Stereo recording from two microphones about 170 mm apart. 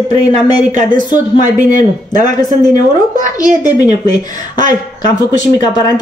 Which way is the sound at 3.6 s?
20° left (ahead or behind).